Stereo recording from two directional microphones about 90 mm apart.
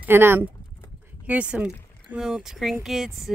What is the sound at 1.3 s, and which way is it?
Speech, 15° right (ahead or behind).